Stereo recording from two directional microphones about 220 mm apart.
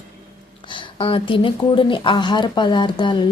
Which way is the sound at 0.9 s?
25° left (ahead or behind).